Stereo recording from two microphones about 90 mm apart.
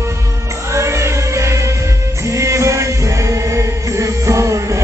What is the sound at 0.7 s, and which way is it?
Music, 30° right (ahead or behind).